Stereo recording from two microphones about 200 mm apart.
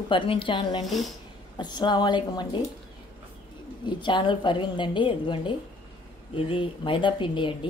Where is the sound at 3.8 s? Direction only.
25° left (ahead or behind).